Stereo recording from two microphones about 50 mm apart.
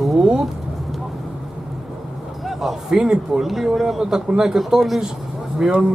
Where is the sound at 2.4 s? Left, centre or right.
Centre.